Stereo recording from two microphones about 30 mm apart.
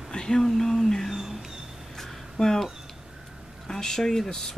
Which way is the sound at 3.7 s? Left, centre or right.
Centre.